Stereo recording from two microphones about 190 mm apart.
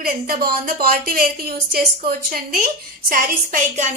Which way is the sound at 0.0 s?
50° right (ahead or behind).